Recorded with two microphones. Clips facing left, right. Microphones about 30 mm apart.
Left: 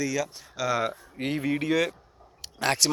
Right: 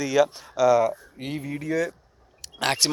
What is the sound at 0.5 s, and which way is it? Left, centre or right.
Speech, centre.